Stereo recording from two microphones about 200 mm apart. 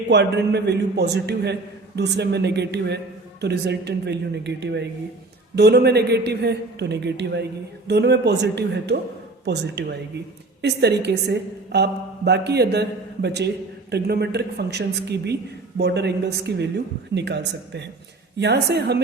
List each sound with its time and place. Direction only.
0.1 s a woman's voice: 60° right (ahead or behind)